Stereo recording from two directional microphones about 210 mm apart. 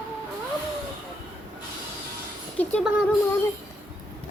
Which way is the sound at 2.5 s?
5° left (ahead or behind).